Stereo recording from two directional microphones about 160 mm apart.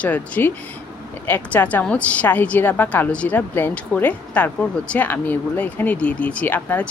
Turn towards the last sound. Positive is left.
turn(degrees=10)  # may be behind; listen again after turning